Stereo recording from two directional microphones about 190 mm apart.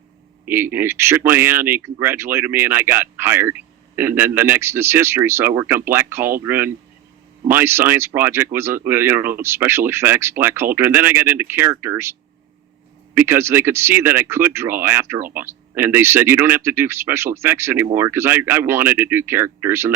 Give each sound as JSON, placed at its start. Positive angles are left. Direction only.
{"t": 0.4, "sound": "speech", "side_deg": -10}
{"t": 13.1, "sound": "speech", "side_deg": -10}